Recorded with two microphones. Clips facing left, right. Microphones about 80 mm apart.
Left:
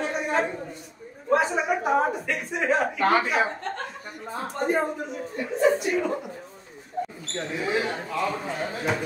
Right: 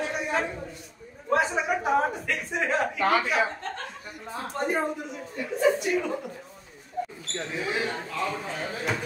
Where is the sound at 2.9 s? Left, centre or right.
Left.